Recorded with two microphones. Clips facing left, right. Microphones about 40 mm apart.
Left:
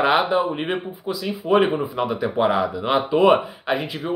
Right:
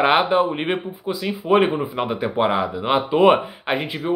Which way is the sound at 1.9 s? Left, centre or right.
Right.